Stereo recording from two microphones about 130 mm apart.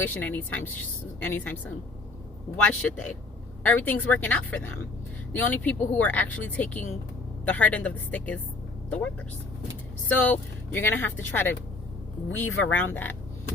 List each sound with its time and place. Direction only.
0.0 s speech: 15° left (ahead or behind)
2.6 s speech: 10° left (ahead or behind)
10.1 s speech: 15° left (ahead or behind)